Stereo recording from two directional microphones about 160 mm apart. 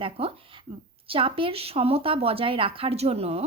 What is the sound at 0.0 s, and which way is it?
Speech, 35° right (ahead or behind).